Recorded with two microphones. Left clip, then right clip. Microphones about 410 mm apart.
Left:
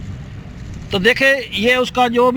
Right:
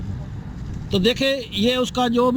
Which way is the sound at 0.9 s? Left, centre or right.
Left.